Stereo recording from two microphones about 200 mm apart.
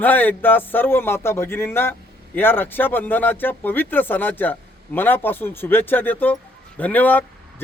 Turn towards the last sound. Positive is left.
turn(degrees=10)  # may be behind; listen again after turning